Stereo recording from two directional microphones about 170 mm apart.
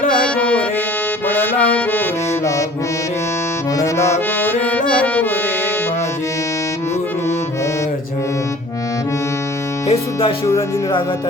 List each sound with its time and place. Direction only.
0.2 s music: 10° left (ahead or behind)
3.8 s music: 15° left (ahead or behind)
9.8 s music: 35° left (ahead or behind)